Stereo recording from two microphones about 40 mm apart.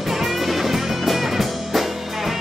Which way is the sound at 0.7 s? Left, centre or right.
Centre.